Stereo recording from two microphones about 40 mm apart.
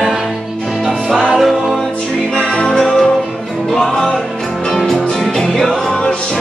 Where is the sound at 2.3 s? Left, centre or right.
Left.